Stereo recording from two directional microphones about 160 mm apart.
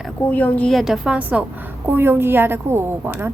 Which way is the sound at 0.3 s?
10° left (ahead or behind).